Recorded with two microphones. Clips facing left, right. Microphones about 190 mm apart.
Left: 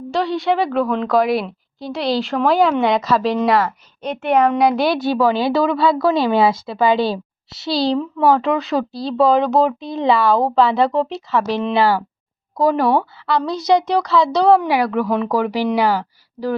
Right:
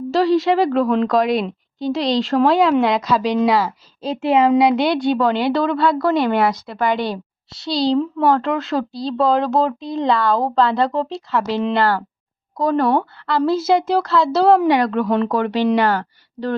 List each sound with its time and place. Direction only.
0.1 s speech: centre (ahead or behind)
4.0 s a woman's voice: 30° right (ahead or behind)
4.4 s speech: 5° right (ahead or behind)